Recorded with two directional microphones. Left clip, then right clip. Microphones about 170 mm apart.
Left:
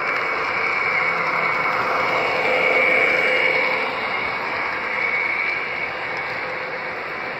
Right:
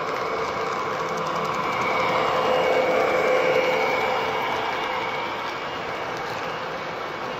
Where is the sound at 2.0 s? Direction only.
Centre (ahead or behind).